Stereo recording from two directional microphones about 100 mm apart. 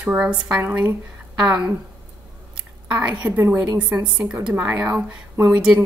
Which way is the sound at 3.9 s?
10° right (ahead or behind).